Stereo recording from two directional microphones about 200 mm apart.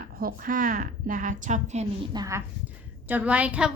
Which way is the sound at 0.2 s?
45° right (ahead or behind).